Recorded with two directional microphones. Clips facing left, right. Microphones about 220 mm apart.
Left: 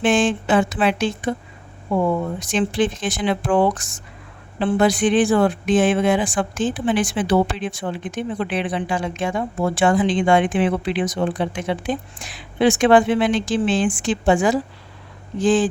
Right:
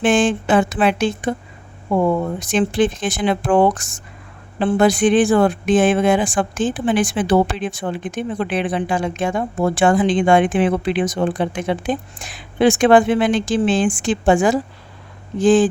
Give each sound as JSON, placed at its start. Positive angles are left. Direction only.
{"t": 0.0, "sound": "speech", "side_deg": -50}
{"t": 2.4, "sound": "speech", "side_deg": -50}